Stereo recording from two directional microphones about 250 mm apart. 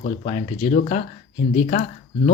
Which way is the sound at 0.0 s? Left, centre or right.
Left.